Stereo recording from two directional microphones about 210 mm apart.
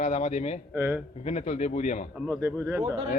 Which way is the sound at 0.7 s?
10° right (ahead or behind).